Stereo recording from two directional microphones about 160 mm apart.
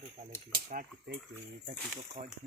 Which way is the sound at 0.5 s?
65° right (ahead or behind).